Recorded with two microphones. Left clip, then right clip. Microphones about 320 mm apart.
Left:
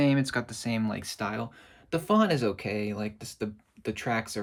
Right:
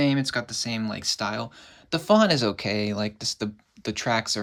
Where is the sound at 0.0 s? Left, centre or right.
Centre.